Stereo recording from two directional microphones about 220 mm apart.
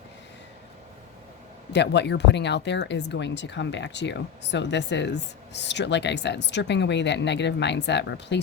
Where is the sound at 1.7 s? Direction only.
50° left (ahead or behind).